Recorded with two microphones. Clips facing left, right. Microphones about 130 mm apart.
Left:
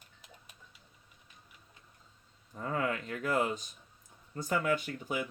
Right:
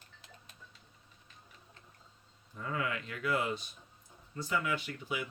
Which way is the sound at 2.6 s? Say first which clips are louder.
Left 3 dB; 40° left (ahead or behind).